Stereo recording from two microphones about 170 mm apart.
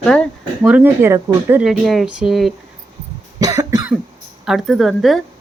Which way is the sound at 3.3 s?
20° right (ahead or behind).